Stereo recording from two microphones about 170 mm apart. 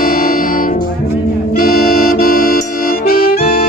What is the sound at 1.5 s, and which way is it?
Accordion, 60° left (ahead or behind).